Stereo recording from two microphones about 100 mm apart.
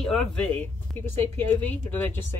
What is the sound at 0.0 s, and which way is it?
Speech, 5° left (ahead or behind).